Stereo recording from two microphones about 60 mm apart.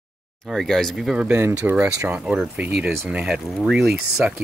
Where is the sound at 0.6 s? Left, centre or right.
Centre.